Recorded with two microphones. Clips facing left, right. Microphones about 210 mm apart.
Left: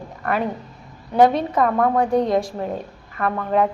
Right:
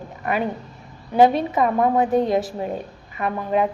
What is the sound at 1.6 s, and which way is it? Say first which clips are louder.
Speech: even; 15° right (ahead or behind).